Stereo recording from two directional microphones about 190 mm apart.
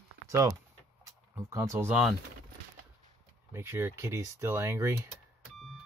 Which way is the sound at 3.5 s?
10° right (ahead or behind).